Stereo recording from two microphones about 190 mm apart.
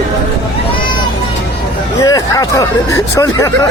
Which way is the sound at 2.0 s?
15° left (ahead or behind).